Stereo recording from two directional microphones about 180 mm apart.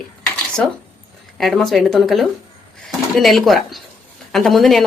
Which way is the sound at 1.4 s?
Centre (ahead or behind).